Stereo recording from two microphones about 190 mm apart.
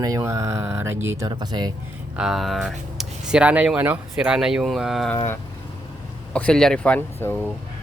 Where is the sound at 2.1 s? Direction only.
Centre (ahead or behind).